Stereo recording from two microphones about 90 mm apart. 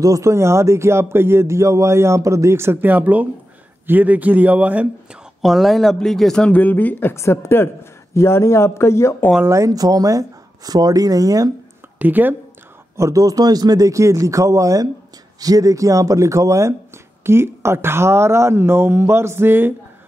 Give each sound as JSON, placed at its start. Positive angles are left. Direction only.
{"t": 0.0, "sound": "a man's voice", "side_deg": -35}
{"t": 5.4, "sound": "speech", "side_deg": 0}
{"t": 9.5, "sound": "speech", "side_deg": -40}
{"t": 12.0, "sound": "speech", "side_deg": -20}
{"t": 12.9, "sound": "a man's voice", "side_deg": -35}